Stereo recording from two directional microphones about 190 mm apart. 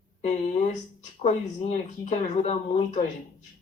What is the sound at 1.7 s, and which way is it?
Speech, 40° left (ahead or behind).